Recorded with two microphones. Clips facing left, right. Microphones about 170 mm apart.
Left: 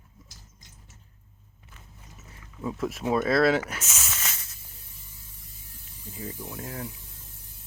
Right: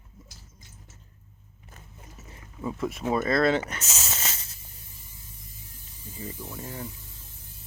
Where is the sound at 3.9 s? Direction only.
30° right (ahead or behind).